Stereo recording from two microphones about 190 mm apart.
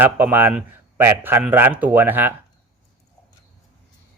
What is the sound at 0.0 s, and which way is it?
Speech, 10° right (ahead or behind).